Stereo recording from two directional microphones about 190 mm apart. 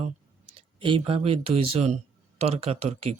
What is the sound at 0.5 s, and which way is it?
Speech, 25° right (ahead or behind).